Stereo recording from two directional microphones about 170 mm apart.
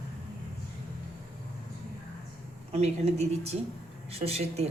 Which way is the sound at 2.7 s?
40° right (ahead or behind).